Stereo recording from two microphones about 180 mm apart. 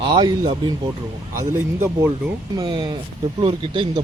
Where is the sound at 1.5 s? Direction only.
15° right (ahead or behind).